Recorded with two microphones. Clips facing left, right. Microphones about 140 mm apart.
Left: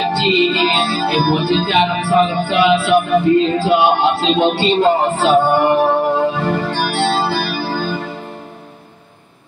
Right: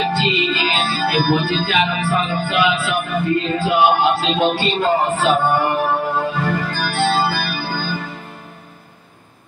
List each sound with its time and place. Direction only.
0.1 s music: 25° left (ahead or behind)